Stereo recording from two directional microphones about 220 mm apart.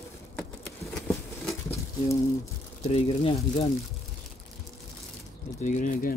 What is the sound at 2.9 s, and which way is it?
Speech, 25° left (ahead or behind).